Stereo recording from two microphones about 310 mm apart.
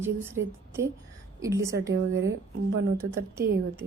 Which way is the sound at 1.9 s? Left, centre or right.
Right.